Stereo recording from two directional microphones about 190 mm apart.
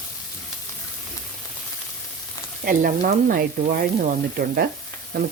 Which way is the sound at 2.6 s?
50° right (ahead or behind).